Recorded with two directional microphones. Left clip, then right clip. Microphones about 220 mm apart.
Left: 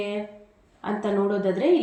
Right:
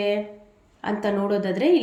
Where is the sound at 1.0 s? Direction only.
25° right (ahead or behind).